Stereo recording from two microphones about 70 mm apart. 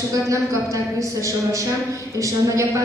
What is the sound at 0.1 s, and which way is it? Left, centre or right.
A woman's voice, right.